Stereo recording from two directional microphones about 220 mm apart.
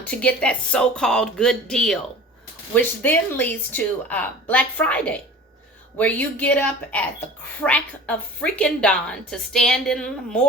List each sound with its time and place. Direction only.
0.0 s a woman's voice: 5° left (ahead or behind)